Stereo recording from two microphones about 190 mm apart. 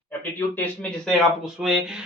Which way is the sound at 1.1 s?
Centre (ahead or behind).